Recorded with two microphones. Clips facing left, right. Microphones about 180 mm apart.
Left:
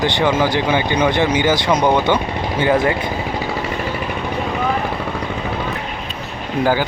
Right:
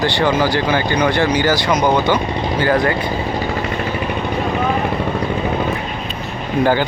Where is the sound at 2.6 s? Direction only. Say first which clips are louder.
Left 1 dB; 20° left (ahead or behind).